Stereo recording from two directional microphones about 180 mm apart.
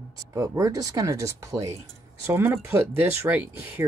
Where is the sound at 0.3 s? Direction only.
20° right (ahead or behind).